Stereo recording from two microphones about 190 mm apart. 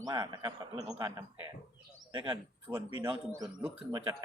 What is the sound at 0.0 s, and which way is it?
A man's voice, 20° right (ahead or behind).